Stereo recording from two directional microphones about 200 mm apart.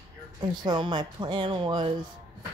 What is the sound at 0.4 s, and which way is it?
A woman's voice, 20° right (ahead or behind).